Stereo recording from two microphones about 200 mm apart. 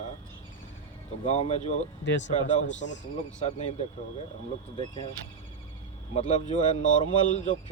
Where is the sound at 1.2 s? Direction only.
35° left (ahead or behind).